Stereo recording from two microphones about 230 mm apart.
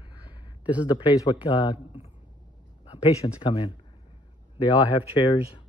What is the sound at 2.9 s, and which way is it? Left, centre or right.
Speech, centre.